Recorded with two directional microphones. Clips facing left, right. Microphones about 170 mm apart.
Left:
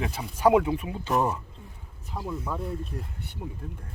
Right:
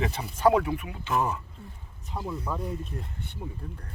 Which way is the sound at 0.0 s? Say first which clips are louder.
Even; 5° left (ahead or behind).